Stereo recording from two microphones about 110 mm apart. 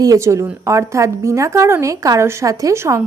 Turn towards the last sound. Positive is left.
turn(degrees=-25)  # may be behind; listen again after turning